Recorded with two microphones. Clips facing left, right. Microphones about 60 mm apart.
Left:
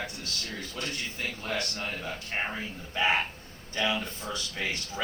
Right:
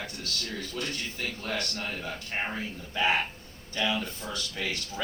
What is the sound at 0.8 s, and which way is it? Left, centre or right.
Speech, centre.